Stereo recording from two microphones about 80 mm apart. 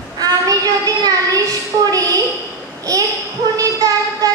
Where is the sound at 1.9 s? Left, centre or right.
Right.